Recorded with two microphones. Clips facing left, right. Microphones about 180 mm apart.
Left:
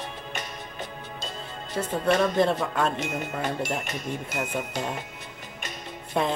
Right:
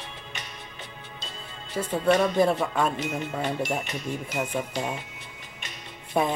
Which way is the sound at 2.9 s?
45° left (ahead or behind).